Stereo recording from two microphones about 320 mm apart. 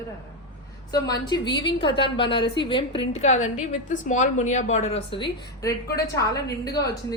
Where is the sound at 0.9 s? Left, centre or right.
Centre.